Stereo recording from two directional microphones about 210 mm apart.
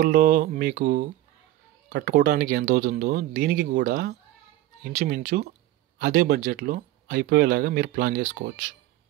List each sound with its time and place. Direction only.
0.0 s speech: 45° right (ahead or behind)